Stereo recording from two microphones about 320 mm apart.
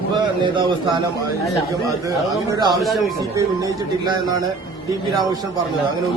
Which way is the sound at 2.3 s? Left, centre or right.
Centre.